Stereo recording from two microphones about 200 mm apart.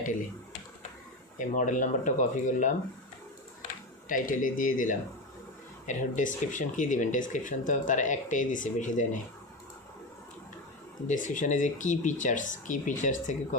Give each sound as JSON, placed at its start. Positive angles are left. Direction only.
{"t": 1.4, "sound": "speech", "side_deg": 40}
{"t": 4.1, "sound": "speech", "side_deg": 45}
{"t": 11.1, "sound": "speech", "side_deg": 40}